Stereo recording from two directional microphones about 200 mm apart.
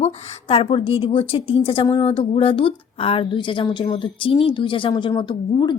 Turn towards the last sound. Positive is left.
turn(degrees=20)  # may be behind; listen again after turning